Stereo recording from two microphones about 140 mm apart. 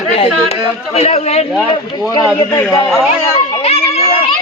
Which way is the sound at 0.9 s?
50° left (ahead or behind).